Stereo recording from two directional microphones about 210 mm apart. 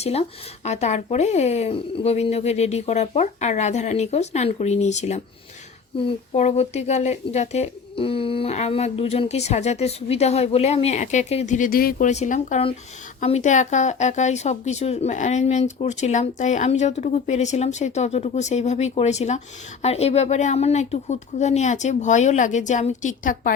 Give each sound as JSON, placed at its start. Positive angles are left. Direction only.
{"t": 0.0, "sound": "speech", "side_deg": 30}